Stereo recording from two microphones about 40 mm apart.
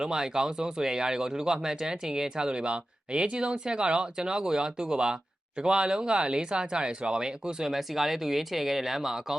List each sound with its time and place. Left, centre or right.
0.0 s speech: centre
7.8 s speech: centre